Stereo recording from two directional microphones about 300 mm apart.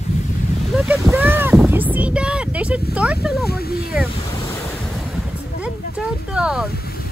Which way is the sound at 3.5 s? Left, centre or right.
Left.